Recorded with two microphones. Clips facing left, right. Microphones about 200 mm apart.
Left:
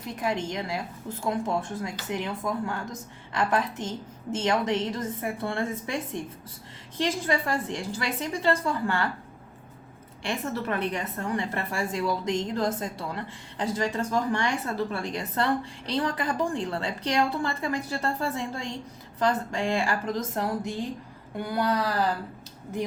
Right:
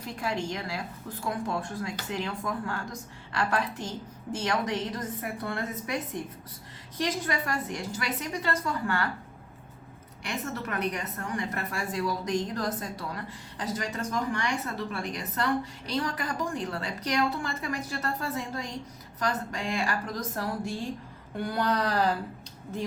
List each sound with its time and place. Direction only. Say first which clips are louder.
0.0 s a woman's voice: left 3 dB; 20° left (ahead or behind)
10.2 s a woman's voice: left 4 dB; 30° left (ahead or behind)
21.3 s a sound: left 2 dB; 10° left (ahead or behind)